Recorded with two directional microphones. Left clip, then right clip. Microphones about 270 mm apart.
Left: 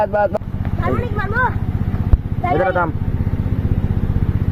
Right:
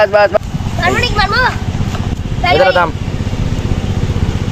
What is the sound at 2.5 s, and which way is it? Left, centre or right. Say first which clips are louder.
Speech: right 7 dB; centre.